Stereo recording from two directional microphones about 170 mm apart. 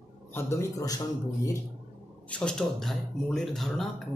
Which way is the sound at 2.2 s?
5° left (ahead or behind).